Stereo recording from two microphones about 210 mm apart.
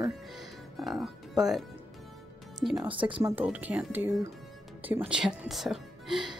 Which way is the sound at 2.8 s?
25° right (ahead or behind).